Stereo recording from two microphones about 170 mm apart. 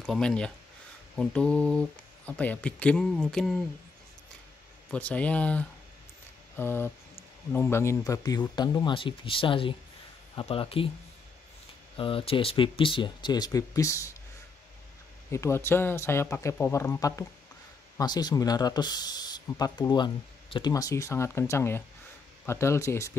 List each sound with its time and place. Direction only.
0.0 s speech: 5° left (ahead or behind)
4.9 s speech: 10° left (ahead or behind)
6.5 s a sound: 15° left (ahead or behind)
7.5 s speech: 15° left (ahead or behind); by 10.9 s 35° left (ahead or behind)
12.0 s speech: 30° left (ahead or behind)
15.3 s speech: 15° left (ahead or behind)